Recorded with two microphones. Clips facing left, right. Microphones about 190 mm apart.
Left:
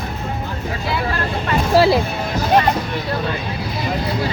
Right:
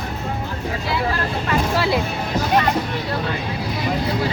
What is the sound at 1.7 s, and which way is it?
Music, 35° left (ahead or behind).